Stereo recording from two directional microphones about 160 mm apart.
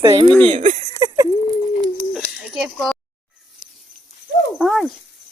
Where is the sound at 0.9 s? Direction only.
20° right (ahead or behind).